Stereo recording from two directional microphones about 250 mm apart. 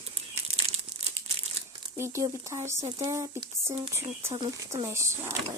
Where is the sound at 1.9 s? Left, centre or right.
Centre.